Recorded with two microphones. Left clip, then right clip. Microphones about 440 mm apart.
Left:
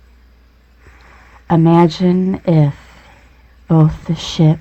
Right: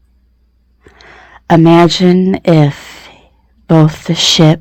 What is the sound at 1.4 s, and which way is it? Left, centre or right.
Speech, centre.